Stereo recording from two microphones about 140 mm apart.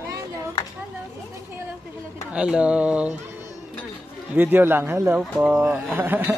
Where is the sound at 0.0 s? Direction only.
20° right (ahead or behind).